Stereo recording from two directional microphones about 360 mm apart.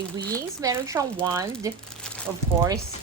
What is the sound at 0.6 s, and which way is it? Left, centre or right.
Speech, centre.